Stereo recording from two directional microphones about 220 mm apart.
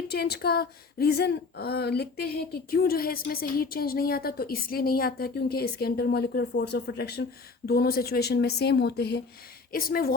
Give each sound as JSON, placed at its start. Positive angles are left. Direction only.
{"t": 0.1, "sound": "a woman's voice", "side_deg": 45}